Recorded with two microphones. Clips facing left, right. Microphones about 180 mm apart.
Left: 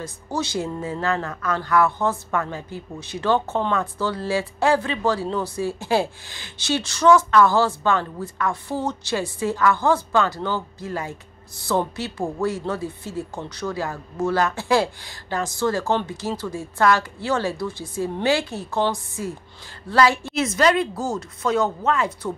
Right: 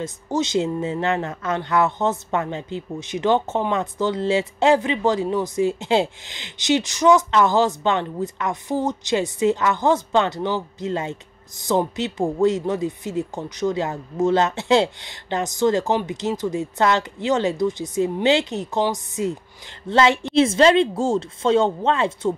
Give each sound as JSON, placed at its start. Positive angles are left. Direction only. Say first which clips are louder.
{"t": 0.0, "sound": "speech", "louder": "right 4 dB", "side_deg": -20}